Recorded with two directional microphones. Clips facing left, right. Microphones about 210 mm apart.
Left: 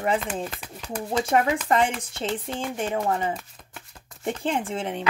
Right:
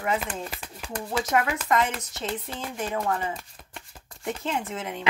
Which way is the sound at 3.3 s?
Centre (ahead or behind).